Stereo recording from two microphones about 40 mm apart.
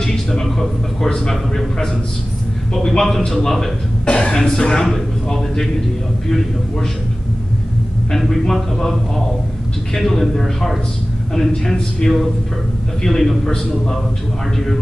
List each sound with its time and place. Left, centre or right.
0.0 s a sound: centre
1.3 s a man's voice: centre
2.7 s a man's voice: centre
4.0 s speech: left
4.4 s a man's voice: centre
8.1 s a man's voice: centre